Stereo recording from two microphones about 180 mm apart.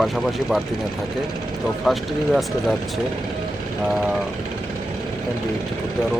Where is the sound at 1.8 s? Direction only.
Centre (ahead or behind).